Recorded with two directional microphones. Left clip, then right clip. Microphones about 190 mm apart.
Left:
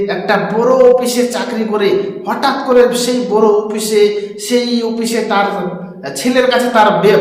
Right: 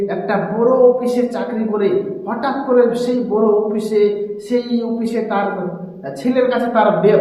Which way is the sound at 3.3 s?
20° left (ahead or behind).